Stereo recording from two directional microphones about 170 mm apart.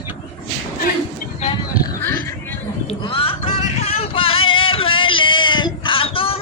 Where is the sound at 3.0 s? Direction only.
30° left (ahead or behind).